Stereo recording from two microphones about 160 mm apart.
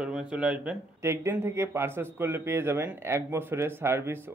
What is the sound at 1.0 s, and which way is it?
Speech, 15° right (ahead or behind).